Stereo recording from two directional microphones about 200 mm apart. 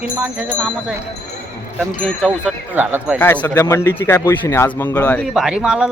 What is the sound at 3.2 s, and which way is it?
Speech, 10° left (ahead or behind).